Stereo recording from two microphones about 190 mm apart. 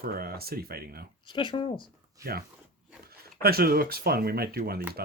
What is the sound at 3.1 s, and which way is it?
Speech, 55° right (ahead or behind).